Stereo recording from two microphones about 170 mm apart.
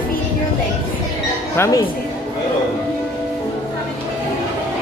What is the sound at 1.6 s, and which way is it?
Speech, 20° left (ahead or behind).